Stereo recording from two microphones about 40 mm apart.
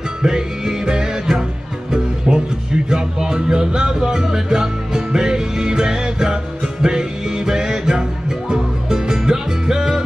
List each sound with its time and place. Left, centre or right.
0.2 s music: centre